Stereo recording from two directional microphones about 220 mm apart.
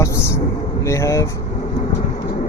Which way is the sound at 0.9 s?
15° left (ahead or behind).